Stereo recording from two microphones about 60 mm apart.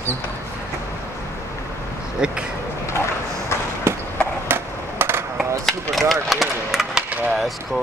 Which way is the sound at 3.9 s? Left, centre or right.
Right.